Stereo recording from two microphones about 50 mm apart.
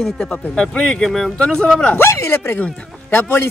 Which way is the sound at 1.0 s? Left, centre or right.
Centre.